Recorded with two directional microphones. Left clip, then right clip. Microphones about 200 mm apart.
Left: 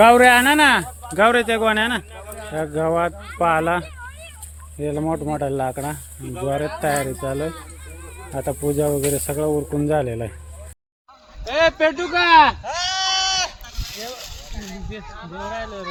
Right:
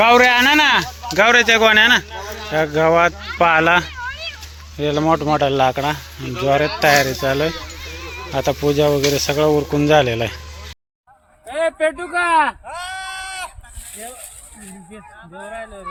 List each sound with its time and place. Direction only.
0.0 s speech: 20° left (ahead or behind); by 3.8 s centre (ahead or behind)
4.1 s a sound: 60° left (ahead or behind)
4.8 s speech: 5° left (ahead or behind)
8.7 s speech: 15° left (ahead or behind)
11.4 s speech: 15° right (ahead or behind)
12.6 s goat: 60° right (ahead or behind)